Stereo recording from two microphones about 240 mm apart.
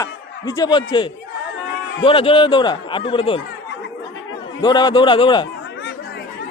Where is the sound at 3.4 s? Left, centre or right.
Left.